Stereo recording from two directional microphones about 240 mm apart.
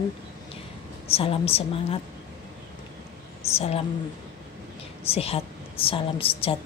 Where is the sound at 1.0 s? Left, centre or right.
Left.